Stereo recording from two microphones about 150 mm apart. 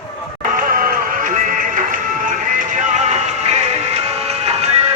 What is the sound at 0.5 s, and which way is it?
Music, 70° right (ahead or behind).